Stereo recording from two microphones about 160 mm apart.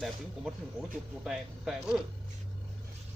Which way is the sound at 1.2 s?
Centre (ahead or behind).